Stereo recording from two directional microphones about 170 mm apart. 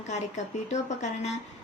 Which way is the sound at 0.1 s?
45° left (ahead or behind).